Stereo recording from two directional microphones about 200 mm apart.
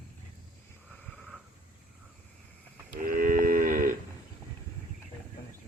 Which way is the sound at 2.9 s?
45° right (ahead or behind).